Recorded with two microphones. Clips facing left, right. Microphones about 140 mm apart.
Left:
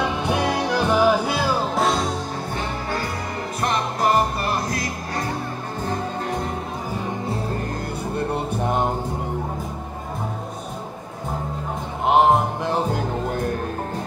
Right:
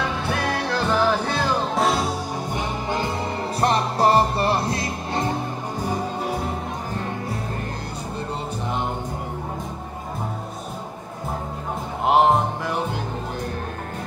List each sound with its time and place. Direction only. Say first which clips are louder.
0.0 s music: left 3 dB; 15° left (ahead or behind); by 2.1 s 5° right (ahead or behind)
3.6 s music: right 2 dB; 35° right (ahead or behind)
5.8 s music: even; 10° right (ahead or behind)
8.3 s music: left 4 dB; 50° left (ahead or behind)
12.1 s music: left 1 dB; centre (ahead or behind)